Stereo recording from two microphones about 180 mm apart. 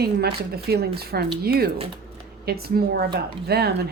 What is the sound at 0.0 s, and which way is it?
Speech, 60° right (ahead or behind).